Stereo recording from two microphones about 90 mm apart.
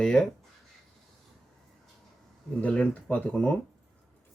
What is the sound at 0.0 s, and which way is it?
Speech, 10° left (ahead or behind).